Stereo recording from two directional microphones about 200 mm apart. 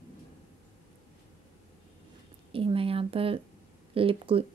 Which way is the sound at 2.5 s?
25° right (ahead or behind).